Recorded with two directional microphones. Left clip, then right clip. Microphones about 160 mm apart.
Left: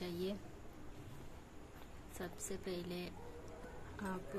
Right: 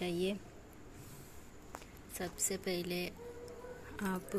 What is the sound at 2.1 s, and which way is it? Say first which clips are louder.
A woman's voice: right 7 dB; 20° right (ahead or behind).